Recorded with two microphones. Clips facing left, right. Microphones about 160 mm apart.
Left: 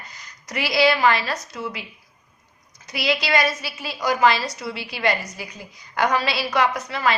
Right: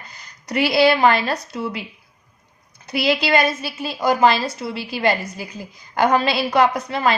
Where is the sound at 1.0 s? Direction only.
50° right (ahead or behind).